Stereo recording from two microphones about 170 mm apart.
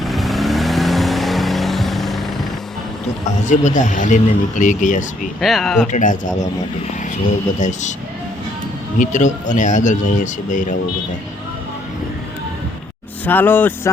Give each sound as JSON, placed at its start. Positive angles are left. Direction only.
{"t": 0.0, "sound": "vehicle", "side_deg": 0}
{"t": 3.2, "sound": "speech", "side_deg": 45}
{"t": 5.4, "sound": "speech", "side_deg": 0}
{"t": 5.9, "sound": "speech", "side_deg": 50}
{"t": 7.6, "sound": "speech", "side_deg": 45}
{"t": 9.0, "sound": "speech", "side_deg": 45}
{"t": 13.2, "sound": "speech", "side_deg": 10}